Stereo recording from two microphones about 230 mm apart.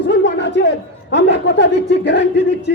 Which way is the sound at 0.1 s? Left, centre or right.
Left.